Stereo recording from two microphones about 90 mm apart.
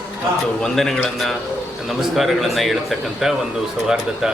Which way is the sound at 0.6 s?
5° left (ahead or behind).